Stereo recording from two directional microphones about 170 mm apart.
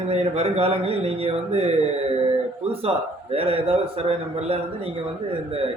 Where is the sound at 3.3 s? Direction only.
35° right (ahead or behind).